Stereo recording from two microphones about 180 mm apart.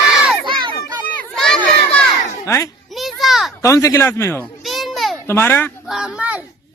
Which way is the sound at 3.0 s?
Centre (ahead or behind).